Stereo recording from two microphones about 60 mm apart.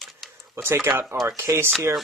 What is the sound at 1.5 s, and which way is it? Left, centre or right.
Speech, right.